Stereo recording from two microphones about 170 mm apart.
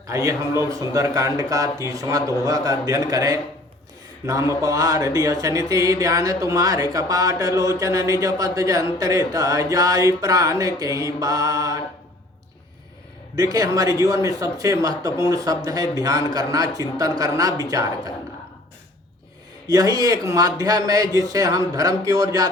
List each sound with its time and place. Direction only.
0.1 s speech: 20° right (ahead or behind)
13.3 s speech: 20° right (ahead or behind)
19.6 s speech: 20° right (ahead or behind)